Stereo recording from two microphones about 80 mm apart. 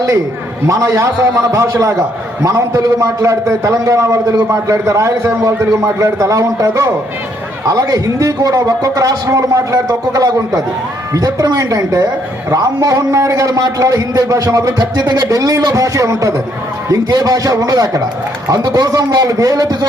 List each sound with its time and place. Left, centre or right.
0.7 s a man's voice: right
4.4 s a man's voice: right
14.9 s a man's voice: right
17.1 s a man's voice: right